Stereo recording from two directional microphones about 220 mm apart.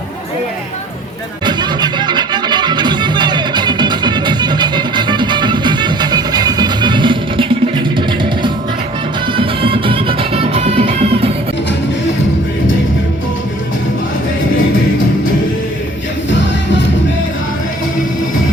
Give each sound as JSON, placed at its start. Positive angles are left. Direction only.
{"t": 1.5, "sound": "music", "side_deg": -20}